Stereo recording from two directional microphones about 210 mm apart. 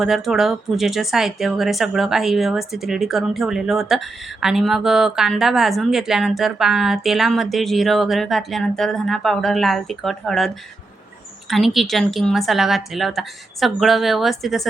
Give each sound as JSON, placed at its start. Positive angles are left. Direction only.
{"t": 0.0, "sound": "speech", "side_deg": 0}